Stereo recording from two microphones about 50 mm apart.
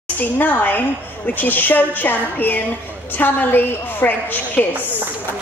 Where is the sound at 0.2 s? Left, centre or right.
Left.